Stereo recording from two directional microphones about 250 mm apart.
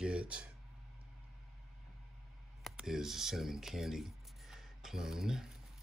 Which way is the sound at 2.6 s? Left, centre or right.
Centre.